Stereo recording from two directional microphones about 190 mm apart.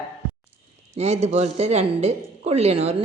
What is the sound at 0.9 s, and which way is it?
A woman's voice, 35° right (ahead or behind).